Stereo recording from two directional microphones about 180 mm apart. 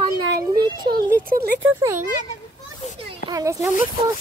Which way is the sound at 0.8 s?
55° right (ahead or behind).